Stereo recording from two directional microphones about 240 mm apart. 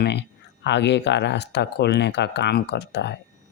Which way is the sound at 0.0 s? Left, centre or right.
Left.